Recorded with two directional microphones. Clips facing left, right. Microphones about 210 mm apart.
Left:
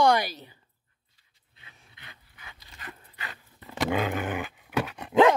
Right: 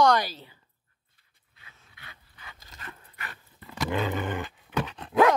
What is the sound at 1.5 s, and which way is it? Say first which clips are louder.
Dog: left 1 dB; 20° left (ahead or behind).